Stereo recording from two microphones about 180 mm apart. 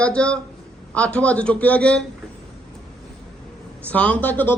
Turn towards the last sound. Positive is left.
turn(degrees=10)  # may be behind; listen again after turning